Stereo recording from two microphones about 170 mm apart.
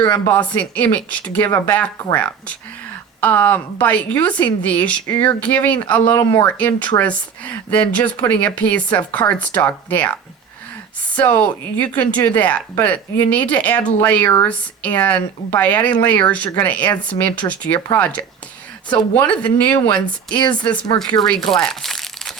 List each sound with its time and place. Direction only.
0.1 s speech: 10° left (ahead or behind)
2.0 s speech: 20° left (ahead or behind)
20.3 s speech: 25° left (ahead or behind)
21.0 s speech: 5° left (ahead or behind)
21.5 s crumpling: centre (ahead or behind)